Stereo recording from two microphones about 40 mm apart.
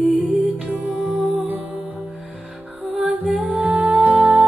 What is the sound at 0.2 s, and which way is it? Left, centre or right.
Music, right.